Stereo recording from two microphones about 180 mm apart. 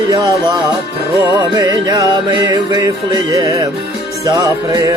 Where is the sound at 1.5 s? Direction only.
20° right (ahead or behind).